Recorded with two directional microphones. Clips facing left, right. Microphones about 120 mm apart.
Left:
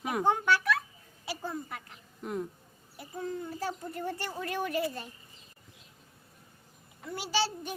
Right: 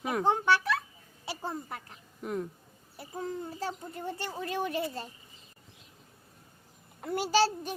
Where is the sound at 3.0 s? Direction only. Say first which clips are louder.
Even; 35° right (ahead or behind).